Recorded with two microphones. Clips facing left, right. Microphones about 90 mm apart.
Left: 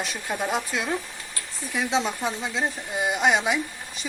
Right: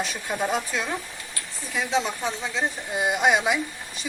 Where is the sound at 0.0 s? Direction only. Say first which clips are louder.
Right 1 dB; centre (ahead or behind).